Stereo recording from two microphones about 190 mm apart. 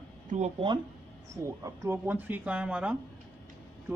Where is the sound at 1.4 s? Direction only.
15° right (ahead or behind).